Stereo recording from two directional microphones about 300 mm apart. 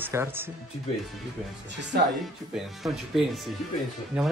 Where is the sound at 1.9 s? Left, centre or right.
Right.